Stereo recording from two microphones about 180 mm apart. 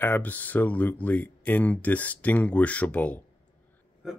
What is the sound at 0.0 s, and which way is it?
Speech, 10° left (ahead or behind).